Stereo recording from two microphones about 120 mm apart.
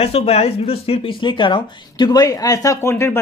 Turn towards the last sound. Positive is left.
turn(degrees=25)  # may be behind; listen again after turning